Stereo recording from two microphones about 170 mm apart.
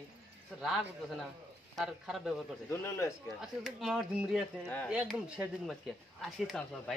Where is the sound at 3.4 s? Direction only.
Centre (ahead or behind).